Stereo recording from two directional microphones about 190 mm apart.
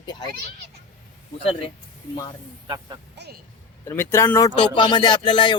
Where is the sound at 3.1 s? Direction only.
60° right (ahead or behind).